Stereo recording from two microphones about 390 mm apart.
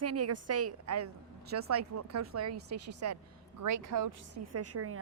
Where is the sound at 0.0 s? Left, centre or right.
Right.